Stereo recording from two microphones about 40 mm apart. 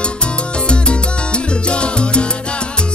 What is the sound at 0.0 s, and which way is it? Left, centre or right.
Salsa music, left.